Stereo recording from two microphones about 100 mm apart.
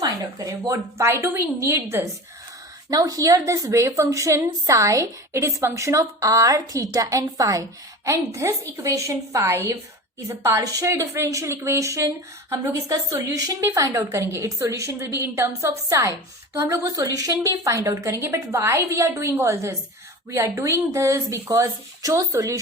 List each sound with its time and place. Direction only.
0.0 s a woman's voice: 35° right (ahead or behind)
2.9 s a woman's voice: 35° right (ahead or behind)